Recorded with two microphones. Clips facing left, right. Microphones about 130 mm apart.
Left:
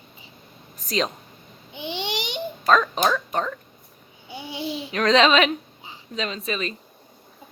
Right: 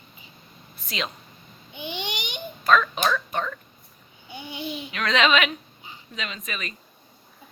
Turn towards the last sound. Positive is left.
turn(degrees=30)  # may be behind; listen again after turning